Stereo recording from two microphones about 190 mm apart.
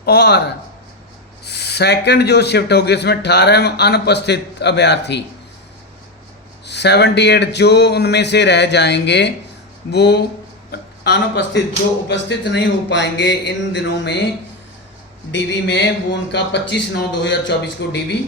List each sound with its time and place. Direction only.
0.0 s a man's voice: 60° left (ahead or behind)
1.5 s a man's voice: 60° left (ahead or behind)
6.7 s a man's voice: 60° left (ahead or behind)
10.7 s hiccup: 60° left (ahead or behind)
12.0 s a man's voice: 70° left (ahead or behind)
15.3 s a man's voice: 70° left (ahead or behind)